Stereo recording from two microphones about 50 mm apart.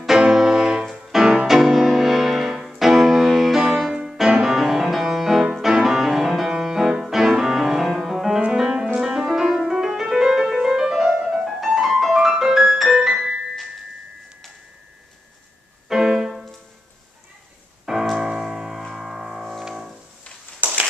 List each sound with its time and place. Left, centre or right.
0.2 s music: centre
15.9 s music: centre
18.1 s music: centre
20.6 s a sound: right